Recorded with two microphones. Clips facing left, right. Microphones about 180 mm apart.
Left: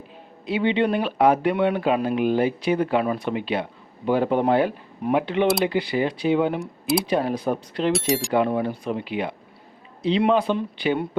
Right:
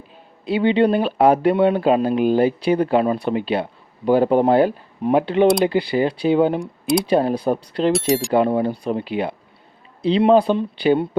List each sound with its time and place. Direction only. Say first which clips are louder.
0.4 s speech: right 5 dB; 35° right (ahead or behind)
6.6 s speech: right 3 dB; centre (ahead or behind)
7.0 s speech: right 5 dB; 30° right (ahead or behind)
7.9 s speech: right 4 dB; centre (ahead or behind)
8.3 s speech: right 4 dB; 30° right (ahead or behind)